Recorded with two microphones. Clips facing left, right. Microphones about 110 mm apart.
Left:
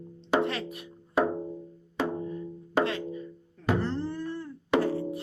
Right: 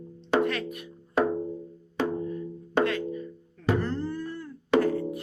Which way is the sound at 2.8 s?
25° left (ahead or behind).